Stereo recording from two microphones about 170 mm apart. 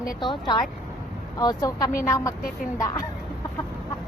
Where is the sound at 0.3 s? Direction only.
25° left (ahead or behind).